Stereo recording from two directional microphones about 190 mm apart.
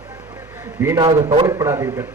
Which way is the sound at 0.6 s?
15° right (ahead or behind).